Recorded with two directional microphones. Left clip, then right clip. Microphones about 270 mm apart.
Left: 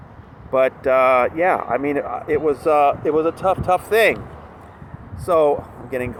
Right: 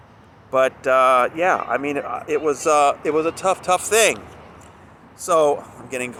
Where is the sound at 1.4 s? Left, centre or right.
Centre.